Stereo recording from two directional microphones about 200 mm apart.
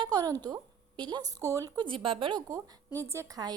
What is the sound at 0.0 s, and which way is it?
A woman's voice, 20° right (ahead or behind).